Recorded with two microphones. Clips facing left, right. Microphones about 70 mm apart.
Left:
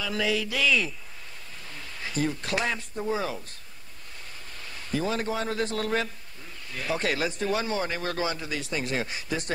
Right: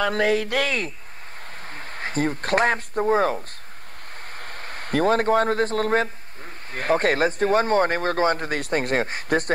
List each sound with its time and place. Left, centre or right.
0.0 s a man's voice: right
4.4 s a man's voice: right